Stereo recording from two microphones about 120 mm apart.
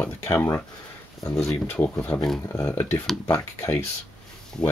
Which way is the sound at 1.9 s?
20° left (ahead or behind).